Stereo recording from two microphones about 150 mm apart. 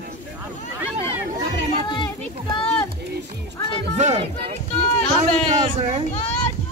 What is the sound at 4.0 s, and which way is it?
Speech, 50° right (ahead or behind).